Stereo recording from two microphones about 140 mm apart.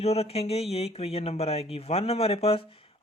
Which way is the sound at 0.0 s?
50° left (ahead or behind).